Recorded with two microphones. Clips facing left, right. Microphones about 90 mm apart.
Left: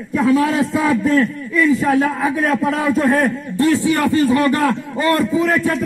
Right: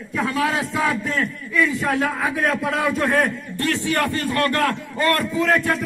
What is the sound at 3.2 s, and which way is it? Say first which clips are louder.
A man's voice: left 5 dB; 5° left (ahead or behind).